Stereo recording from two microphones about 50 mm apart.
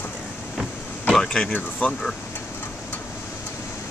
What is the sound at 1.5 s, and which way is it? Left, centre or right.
Speech, left.